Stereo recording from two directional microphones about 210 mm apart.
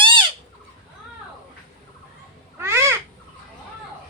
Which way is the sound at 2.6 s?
10° right (ahead or behind).